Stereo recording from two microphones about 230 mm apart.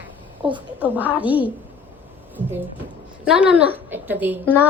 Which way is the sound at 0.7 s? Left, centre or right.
Centre.